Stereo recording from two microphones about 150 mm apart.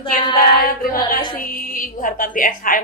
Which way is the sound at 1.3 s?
70° left (ahead or behind).